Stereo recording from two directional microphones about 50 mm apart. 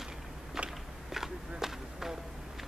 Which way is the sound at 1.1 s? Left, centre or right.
Centre.